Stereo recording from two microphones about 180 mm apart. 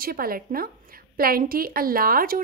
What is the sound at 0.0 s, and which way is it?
A woman's voice, 55° right (ahead or behind).